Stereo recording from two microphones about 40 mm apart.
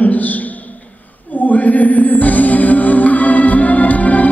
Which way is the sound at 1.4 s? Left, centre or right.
Left.